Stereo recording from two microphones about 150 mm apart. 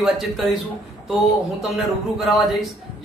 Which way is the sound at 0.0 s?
Centre (ahead or behind).